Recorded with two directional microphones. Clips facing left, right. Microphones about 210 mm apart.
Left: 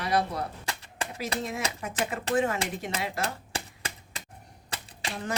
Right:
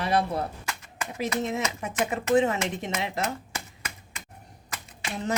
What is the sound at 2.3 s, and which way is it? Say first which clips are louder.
Speech: right 4 dB; 35° left (ahead or behind).